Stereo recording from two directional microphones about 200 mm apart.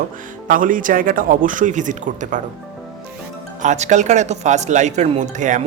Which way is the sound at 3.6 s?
35° right (ahead or behind).